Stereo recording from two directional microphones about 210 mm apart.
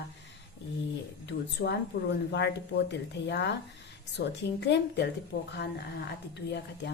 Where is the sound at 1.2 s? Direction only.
50° left (ahead or behind).